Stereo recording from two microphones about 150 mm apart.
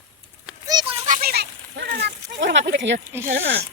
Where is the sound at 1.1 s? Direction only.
80° right.